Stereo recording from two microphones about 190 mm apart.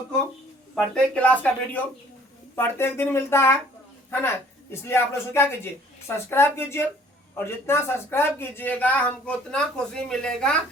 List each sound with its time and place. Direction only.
0.8 s speech: 5° left (ahead or behind)
4.7 s speech: 10° left (ahead or behind)